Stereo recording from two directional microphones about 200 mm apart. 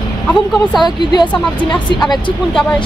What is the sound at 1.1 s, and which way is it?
Speech, 20° left (ahead or behind).